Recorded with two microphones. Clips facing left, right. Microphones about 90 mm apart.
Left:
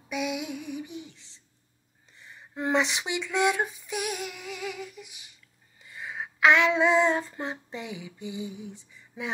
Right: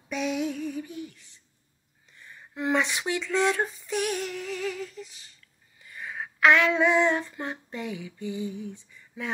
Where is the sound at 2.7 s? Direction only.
20° left (ahead or behind).